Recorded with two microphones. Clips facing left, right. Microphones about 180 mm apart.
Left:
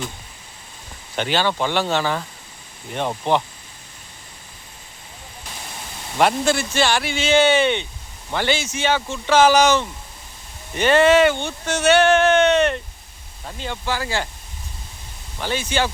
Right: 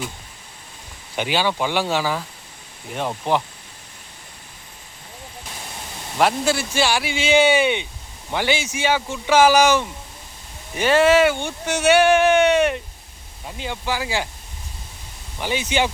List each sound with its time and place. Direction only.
1.1 s speech: 10° right (ahead or behind)
3.3 s speech: 5° right (ahead or behind)
6.1 s speech: 5° right (ahead or behind)
15.4 s speech: 15° right (ahead or behind)